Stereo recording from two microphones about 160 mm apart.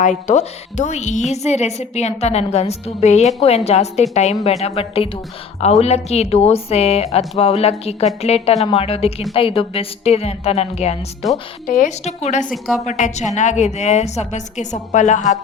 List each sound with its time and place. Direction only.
0.0 s a woman's voice: 50° left (ahead or behind)
11.2 s speech: centre (ahead or behind)
11.6 s a woman's voice: 50° left (ahead or behind)